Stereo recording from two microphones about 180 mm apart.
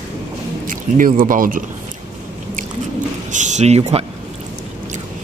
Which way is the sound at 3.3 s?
40° right (ahead or behind).